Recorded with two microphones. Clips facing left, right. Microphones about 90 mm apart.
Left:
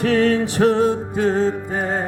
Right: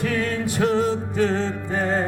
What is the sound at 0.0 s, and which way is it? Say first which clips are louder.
Music: left 7 dB; 70° left (ahead or behind).